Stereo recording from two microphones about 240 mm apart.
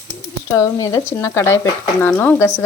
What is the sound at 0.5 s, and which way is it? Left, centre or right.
Speech, centre.